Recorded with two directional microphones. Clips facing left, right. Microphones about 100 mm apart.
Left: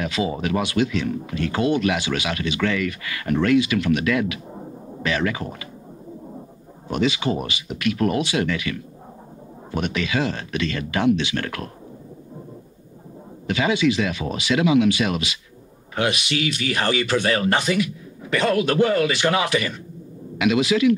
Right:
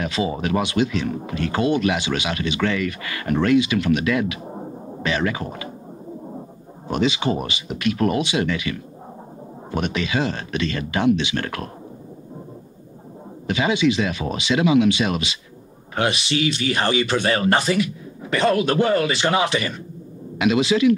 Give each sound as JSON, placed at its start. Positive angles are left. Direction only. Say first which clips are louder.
{"t": 0.0, "sound": "speech", "louder": "right 1 dB", "side_deg": -30}
{"t": 1.0, "sound": "speech", "louder": "even", "side_deg": -40}
{"t": 4.4, "sound": "sidetone", "louder": "right 4 dB", "side_deg": -30}
{"t": 6.9, "sound": "speech", "louder": "right 1 dB", "side_deg": -25}
{"t": 9.8, "sound": "speech", "louder": "right 1 dB", "side_deg": -25}
{"t": 13.5, "sound": "speech", "louder": "right 1 dB", "side_deg": -20}